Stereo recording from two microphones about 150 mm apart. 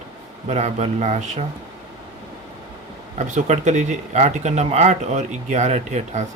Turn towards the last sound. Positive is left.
turn(degrees=-50)  # may be behind; listen again after turning